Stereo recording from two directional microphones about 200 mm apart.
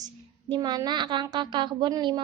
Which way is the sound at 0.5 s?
20° right (ahead or behind).